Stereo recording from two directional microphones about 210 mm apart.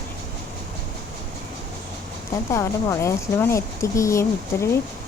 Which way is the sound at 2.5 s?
15° left (ahead or behind).